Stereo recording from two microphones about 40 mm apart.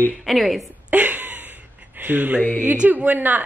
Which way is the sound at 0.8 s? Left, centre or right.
Right.